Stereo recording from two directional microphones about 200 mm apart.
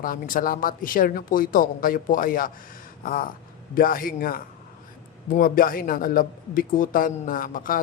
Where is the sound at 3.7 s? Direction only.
45° left (ahead or behind).